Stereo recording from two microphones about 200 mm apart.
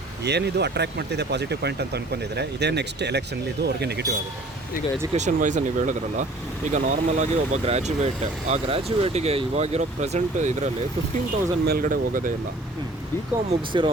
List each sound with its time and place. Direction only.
0.3 s speech: 55° right (ahead or behind)
5.1 s speech: 35° right (ahead or behind)
11.6 s speech: 50° right (ahead or behind)
13.5 s speech: 25° right (ahead or behind)